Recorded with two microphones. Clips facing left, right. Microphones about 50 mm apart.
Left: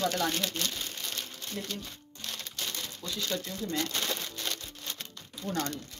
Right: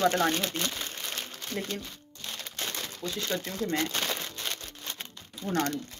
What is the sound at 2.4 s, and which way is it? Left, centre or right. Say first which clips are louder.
Crumpling: right 4 dB; right.